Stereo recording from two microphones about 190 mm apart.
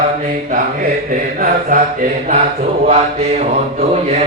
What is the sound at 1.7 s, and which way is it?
Mantra, 45° right (ahead or behind).